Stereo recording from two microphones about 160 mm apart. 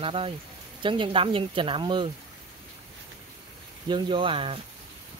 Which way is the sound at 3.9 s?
30° right (ahead or behind).